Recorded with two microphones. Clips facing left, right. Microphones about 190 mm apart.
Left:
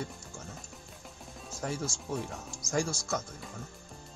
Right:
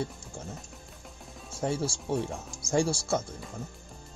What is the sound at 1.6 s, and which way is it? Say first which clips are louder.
Speech: right 6 dB; 30° right (ahead or behind).